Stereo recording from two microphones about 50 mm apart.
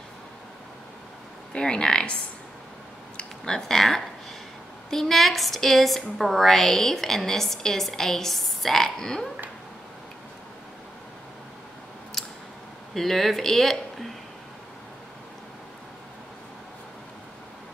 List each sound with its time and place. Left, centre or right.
1.5 s a woman's voice: centre
3.2 s a woman's voice: centre
12.9 s speech: centre